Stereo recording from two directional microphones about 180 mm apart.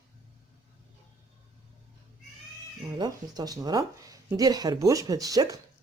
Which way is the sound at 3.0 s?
20° right (ahead or behind).